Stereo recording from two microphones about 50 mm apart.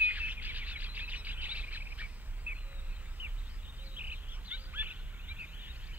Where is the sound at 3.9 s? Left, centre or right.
Right.